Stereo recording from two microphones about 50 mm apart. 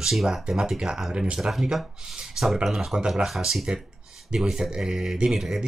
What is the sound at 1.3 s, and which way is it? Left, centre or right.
Speech, centre.